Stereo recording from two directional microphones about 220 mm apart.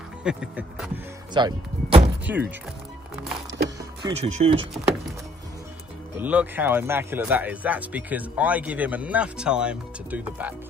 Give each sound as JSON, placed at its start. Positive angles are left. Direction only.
{"t": 0.2, "sound": "speech", "side_deg": -5}
{"t": 1.3, "sound": "speech", "side_deg": -20}
{"t": 2.3, "sound": "speech", "side_deg": -10}
{"t": 4.0, "sound": "speech", "side_deg": -30}
{"t": 6.1, "sound": "speech", "side_deg": -10}